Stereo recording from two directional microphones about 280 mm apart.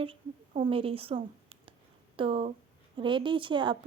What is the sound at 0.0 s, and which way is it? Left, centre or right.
A woman's voice, right.